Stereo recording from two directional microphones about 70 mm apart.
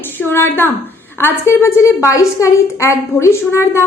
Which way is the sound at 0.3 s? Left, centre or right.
Left.